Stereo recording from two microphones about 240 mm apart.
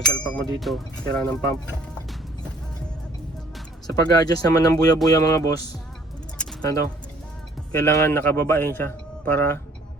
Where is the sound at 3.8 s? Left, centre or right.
Centre.